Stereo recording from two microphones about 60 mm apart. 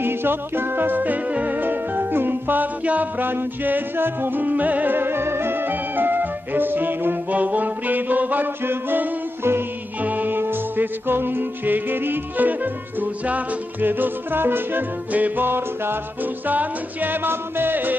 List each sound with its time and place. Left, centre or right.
0.0 s music: right